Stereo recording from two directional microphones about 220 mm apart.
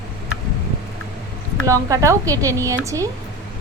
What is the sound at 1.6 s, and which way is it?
A woman's voice, 15° right (ahead or behind).